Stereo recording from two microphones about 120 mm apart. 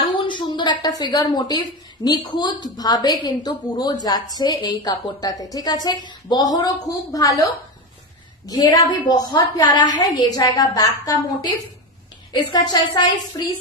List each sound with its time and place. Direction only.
0.2 s a woman's voice: 40° left (ahead or behind)
8.5 s a woman's voice: 35° left (ahead or behind)